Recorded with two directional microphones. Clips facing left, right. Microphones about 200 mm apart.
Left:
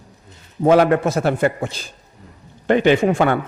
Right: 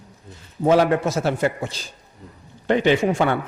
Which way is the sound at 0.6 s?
55° left (ahead or behind).